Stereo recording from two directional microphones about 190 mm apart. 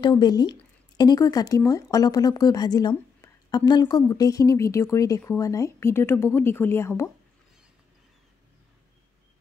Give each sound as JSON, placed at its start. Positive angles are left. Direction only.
{"t": 0.0, "sound": "speech", "side_deg": 20}